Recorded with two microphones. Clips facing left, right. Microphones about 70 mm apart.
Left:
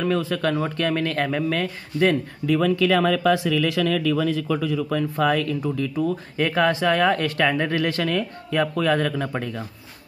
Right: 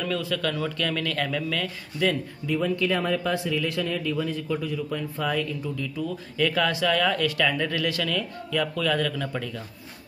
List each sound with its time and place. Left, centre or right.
0.0 s speech: left
2.4 s speech: left
6.0 s speech: left